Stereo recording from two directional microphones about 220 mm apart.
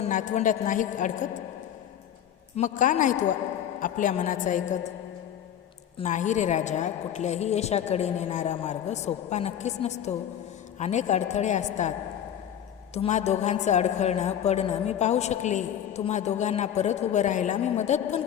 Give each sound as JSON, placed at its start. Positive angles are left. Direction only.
{"t": 0.0, "sound": "a woman's voice", "side_deg": 35}
{"t": 2.6, "sound": "a woman's voice", "side_deg": 35}
{"t": 6.0, "sound": "a woman's voice", "side_deg": 35}